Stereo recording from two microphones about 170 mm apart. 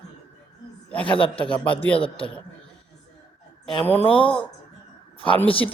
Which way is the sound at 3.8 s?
10° left (ahead or behind).